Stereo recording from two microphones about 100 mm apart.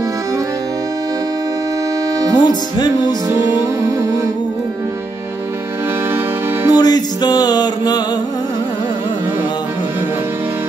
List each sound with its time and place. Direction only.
2.3 s music: 45° left (ahead or behind)
3.3 s music: 25° right (ahead or behind)
6.7 s music: 40° left (ahead or behind)